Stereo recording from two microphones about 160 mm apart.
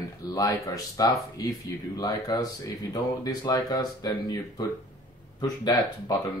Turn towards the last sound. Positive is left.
turn(degrees=25)  # may be behind; listen again after turning